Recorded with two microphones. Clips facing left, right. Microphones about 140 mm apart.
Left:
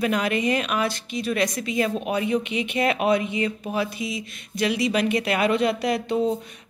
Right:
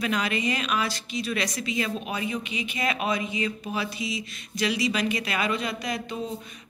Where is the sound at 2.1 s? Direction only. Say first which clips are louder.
Left 7 dB; 65° left (ahead or behind).